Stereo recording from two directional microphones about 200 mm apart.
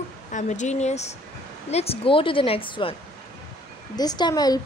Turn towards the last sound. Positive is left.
turn(degrees=20)  # may be behind; listen again after turning